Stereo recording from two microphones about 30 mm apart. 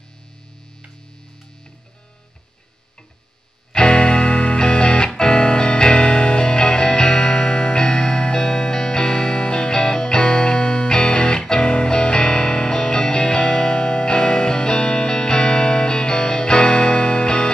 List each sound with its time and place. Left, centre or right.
3.7 s music: left